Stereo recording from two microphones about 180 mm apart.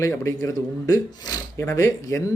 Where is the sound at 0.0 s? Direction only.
15° left (ahead or behind).